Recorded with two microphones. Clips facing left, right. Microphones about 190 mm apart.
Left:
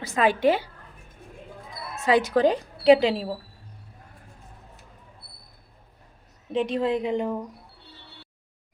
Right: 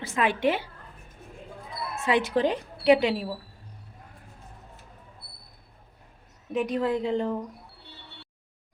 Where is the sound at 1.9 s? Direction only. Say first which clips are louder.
Left 3 dB; 40° left (ahead or behind).